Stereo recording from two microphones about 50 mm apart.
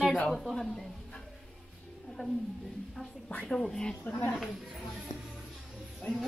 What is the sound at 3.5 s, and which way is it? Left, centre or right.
Speech, centre.